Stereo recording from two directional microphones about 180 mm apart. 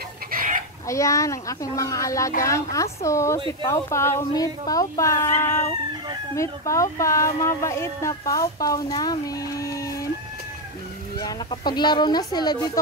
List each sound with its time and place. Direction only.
0.3 s chicken: 50° right (ahead or behind)
0.8 s speech: 15° left (ahead or behind)
11.1 s speech: 25° left (ahead or behind)